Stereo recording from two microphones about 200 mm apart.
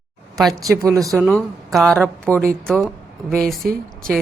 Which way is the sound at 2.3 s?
10° right (ahead or behind).